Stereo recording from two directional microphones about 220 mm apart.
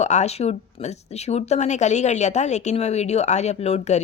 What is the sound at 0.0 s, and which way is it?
A woman's voice, 30° left (ahead or behind).